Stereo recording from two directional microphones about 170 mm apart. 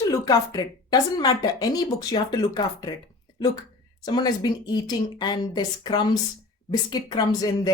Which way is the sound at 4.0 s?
25° left (ahead or behind).